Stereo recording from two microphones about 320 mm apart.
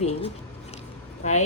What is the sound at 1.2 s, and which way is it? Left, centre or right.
Speech, left.